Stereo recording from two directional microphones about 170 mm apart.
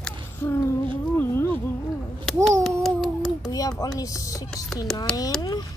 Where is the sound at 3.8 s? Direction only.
20° left (ahead or behind).